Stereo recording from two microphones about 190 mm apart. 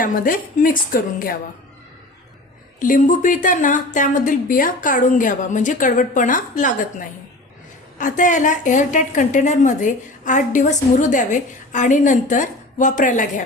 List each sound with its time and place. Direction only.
0.0 s a woman's voice: 45° left (ahead or behind)
2.8 s a woman's voice: 45° left (ahead or behind)
7.9 s a woman's voice: 45° left (ahead or behind)